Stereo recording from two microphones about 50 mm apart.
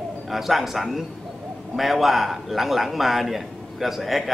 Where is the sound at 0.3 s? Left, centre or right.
Centre.